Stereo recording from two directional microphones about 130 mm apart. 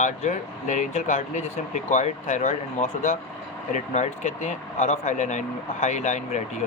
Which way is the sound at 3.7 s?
60° left (ahead or behind).